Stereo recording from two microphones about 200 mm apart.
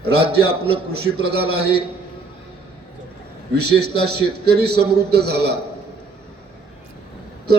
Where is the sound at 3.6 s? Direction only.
55° right (ahead or behind).